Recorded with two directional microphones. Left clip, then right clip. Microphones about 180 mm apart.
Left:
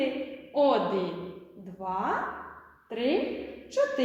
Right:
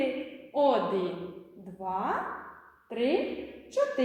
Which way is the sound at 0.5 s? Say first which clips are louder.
Left 1 dB; 15° right (ahead or behind).